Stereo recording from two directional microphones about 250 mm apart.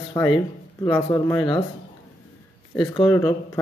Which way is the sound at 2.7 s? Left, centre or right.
Centre.